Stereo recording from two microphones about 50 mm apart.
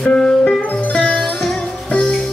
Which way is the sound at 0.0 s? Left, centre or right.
Centre.